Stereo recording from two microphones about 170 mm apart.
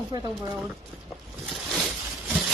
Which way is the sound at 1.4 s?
Centre (ahead or behind).